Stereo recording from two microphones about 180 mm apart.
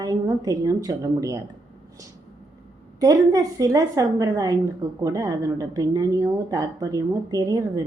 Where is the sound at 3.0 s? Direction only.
20° right (ahead or behind).